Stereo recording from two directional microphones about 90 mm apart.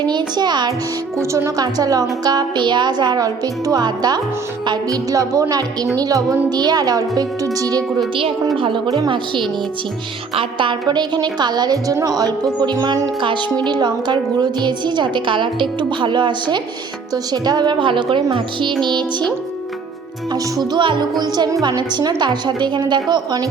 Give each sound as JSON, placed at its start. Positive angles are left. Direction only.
{"t": 0.0, "sound": "a woman's voice", "side_deg": -55}
{"t": 1.2, "sound": "a woman's voice", "side_deg": -35}
{"t": 5.1, "sound": "a woman's voice", "side_deg": -40}
{"t": 7.9, "sound": "a woman's voice", "side_deg": -80}
{"t": 9.0, "sound": "a woman's voice", "side_deg": -60}
{"t": 17.3, "sound": "a woman's voice", "side_deg": -45}
{"t": 20.3, "sound": "a woman's voice", "side_deg": -55}